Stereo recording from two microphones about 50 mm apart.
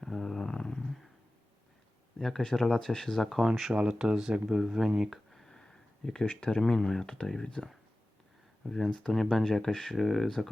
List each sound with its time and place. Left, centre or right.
0.0 s a sound: centre
2.1 s speech: centre
3.8 s speech: centre
4.4 s speech: centre
4.9 s a sound: centre
6.2 s speech: left; by 10.5 s centre